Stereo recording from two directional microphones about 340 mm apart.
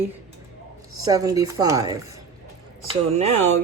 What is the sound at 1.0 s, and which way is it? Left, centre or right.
Speech, centre.